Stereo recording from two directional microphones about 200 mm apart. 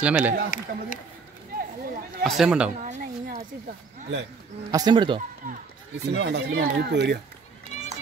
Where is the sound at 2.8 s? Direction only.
45° right (ahead or behind).